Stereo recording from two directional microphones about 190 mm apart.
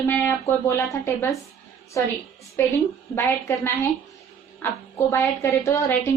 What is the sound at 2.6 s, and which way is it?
A woman's voice, 15° left (ahead or behind).